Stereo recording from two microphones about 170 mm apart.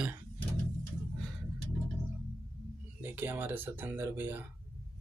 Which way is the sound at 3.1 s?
10° right (ahead or behind).